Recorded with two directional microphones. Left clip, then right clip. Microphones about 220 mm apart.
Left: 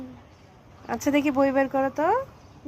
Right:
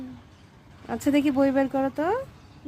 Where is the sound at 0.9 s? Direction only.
15° right (ahead or behind).